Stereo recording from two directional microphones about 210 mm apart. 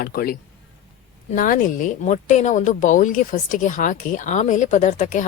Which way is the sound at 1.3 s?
40° left (ahead or behind).